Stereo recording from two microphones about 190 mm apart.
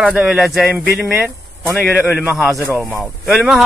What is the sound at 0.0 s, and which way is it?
Speech, 5° right (ahead or behind).